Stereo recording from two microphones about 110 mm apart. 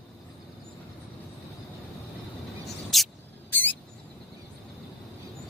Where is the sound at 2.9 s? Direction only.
Centre (ahead or behind).